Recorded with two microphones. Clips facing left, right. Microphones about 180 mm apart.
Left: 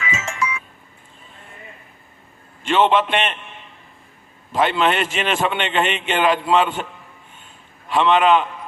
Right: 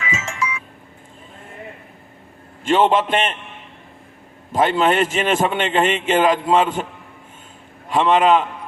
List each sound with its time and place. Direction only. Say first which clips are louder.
0.1 s music: even; 55° left (ahead or behind)
2.6 s a man's voice: right 1 dB; 40° right (ahead or behind)
4.5 s a man's voice: right 2 dB; 45° right (ahead or behind)
7.9 s a man's voice: right 1 dB; 45° right (ahead or behind)